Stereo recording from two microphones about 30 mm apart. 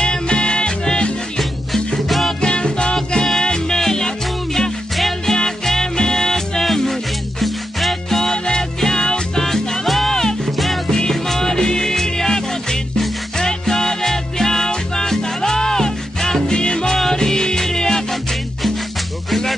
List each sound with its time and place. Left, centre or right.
0.0 s music: left
2.0 s music: centre
2.4 s music: left
5.2 s music: centre
8.2 s music: centre
9.8 s music: centre
10.1 s music: centre
16.4 s music: left